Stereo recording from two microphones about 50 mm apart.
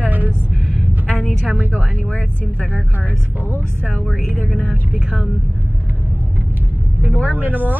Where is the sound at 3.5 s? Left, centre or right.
Left.